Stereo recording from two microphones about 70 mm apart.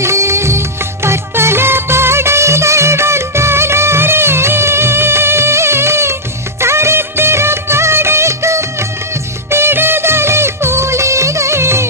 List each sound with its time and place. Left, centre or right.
0.0 s music: right
6.6 s music of bollywood: right
9.5 s music: right